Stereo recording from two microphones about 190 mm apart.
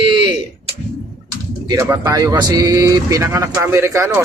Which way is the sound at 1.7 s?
20° right (ahead or behind).